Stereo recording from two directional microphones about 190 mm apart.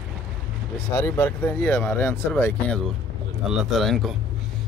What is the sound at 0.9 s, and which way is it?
Speech, 15° left (ahead or behind).